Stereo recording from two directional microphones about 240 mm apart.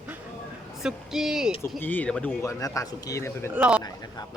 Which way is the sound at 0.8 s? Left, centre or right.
Centre.